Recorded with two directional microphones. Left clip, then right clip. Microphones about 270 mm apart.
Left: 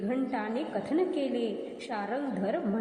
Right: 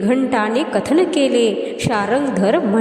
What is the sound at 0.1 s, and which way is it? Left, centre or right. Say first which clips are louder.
A woman's voice: right 16 dB; right.